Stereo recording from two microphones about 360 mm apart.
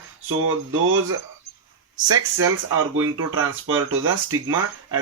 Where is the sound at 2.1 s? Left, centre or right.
Right.